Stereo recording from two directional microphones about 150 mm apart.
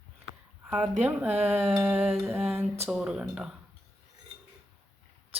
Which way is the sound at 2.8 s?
5° right (ahead or behind).